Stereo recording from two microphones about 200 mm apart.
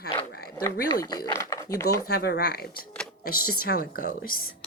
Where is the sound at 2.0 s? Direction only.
50° left (ahead or behind).